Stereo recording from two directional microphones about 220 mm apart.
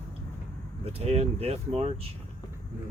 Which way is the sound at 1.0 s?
30° right (ahead or behind).